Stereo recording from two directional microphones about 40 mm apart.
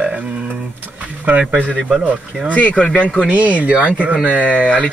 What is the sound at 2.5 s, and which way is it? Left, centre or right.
Speech, left.